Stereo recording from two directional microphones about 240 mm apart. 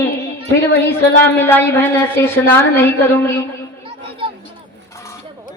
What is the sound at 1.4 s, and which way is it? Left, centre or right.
A woman's voice, centre.